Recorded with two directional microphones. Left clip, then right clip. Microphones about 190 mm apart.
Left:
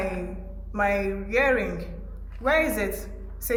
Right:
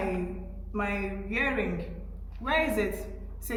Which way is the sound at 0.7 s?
60° left (ahead or behind).